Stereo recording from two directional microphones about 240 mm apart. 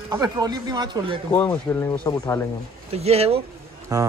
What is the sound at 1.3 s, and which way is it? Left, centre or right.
Speech, centre.